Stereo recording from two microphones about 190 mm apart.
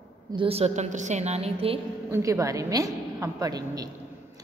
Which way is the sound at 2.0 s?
15° right (ahead or behind).